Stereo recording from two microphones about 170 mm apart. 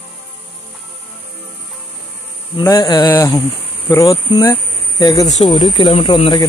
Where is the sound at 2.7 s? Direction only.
25° left (ahead or behind).